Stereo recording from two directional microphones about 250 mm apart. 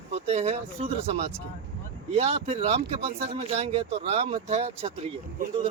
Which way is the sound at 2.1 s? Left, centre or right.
Right.